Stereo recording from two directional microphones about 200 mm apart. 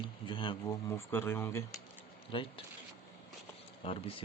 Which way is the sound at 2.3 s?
25° left (ahead or behind).